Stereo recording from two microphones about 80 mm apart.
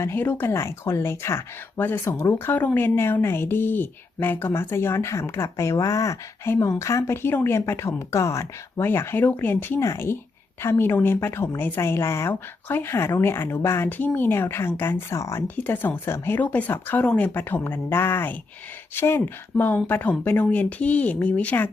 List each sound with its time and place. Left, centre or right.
0.0 s speech: left
0.5 s a woman's voice: left
1.8 s a woman's voice: left
9.8 s a woman's voice: left
13.9 s speech: left
15.1 s a woman's voice: left
15.4 s speech: left